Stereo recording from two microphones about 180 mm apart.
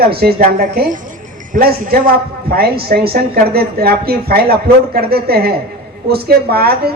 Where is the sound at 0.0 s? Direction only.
60° right (ahead or behind).